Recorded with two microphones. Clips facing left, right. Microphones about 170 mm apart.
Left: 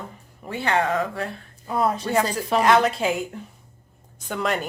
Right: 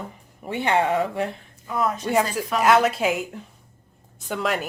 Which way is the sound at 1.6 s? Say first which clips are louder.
Left 2 dB; 30° left (ahead or behind).